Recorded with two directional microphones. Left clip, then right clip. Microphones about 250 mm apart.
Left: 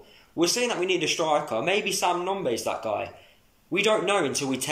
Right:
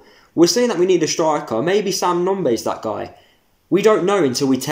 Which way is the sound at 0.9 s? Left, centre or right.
Right.